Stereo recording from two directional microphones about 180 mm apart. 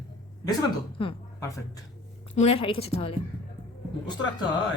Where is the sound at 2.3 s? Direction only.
35° left (ahead or behind).